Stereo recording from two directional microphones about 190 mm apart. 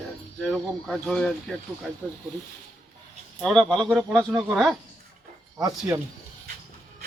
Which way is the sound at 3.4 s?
5° left (ahead or behind).